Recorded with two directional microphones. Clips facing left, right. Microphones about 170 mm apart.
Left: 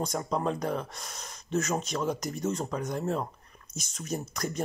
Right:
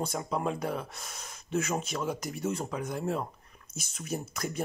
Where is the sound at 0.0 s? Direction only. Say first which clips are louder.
Left 2 dB; 5° right (ahead or behind).